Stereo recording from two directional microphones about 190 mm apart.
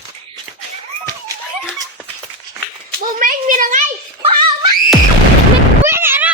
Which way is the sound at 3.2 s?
45° right (ahead or behind).